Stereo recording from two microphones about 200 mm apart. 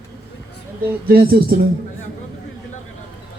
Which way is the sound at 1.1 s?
50° right (ahead or behind).